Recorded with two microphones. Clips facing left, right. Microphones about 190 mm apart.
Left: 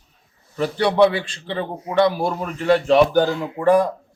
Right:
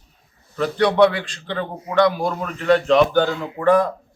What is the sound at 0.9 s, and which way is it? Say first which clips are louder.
Speech: even; 25° left (ahead or behind).